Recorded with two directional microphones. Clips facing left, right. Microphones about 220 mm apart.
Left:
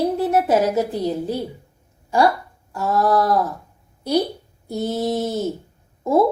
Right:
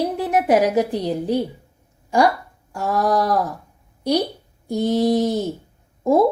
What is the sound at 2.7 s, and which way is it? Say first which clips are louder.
Speech: left 1 dB; 15° right (ahead or behind).